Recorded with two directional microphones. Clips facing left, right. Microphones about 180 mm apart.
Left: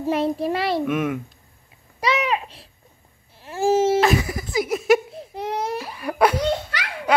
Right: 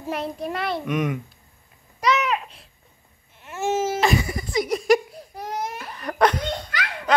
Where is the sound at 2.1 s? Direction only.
30° left (ahead or behind).